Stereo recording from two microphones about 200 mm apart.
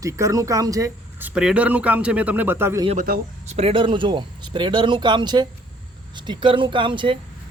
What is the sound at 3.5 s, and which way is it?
Speech, 30° right (ahead or behind).